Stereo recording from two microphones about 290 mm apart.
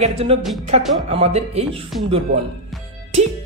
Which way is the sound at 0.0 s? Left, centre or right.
Right.